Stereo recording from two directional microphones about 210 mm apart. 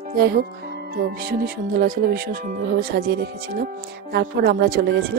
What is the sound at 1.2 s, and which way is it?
Speech, 45° right (ahead or behind).